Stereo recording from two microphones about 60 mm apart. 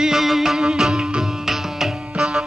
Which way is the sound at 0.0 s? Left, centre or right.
Centre.